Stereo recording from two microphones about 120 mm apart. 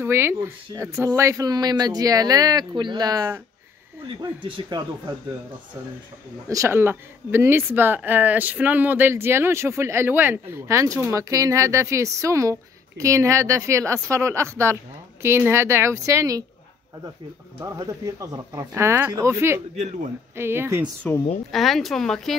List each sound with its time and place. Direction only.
0.0 s speech: 20° right (ahead or behind)
4.2 s speech: 45° right (ahead or behind)
6.5 s speech: 20° right (ahead or behind)
17.6 s speech: 30° right (ahead or behind)
19.8 s a man's voice: 80° right
20.3 s speech: 20° right (ahead or behind)
21.0 s a woman's voice: 10° left (ahead or behind)